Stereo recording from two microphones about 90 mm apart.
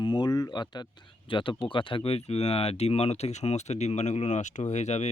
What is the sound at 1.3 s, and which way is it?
Speech, 70° left (ahead or behind).